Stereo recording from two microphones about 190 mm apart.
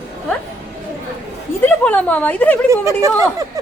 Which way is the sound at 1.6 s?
10° left (ahead or behind).